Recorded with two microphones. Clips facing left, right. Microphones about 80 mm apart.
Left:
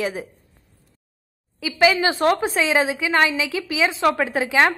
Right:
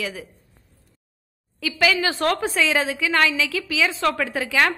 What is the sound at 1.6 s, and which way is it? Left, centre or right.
A woman's voice, centre.